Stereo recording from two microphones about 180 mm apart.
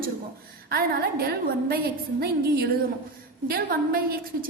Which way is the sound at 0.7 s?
60° right (ahead or behind).